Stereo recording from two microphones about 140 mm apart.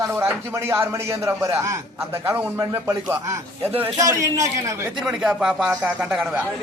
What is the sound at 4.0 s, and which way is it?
Speech, 25° right (ahead or behind).